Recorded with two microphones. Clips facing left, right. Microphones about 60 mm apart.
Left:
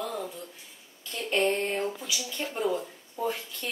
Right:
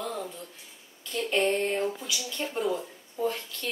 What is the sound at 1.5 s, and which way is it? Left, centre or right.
Speech, centre.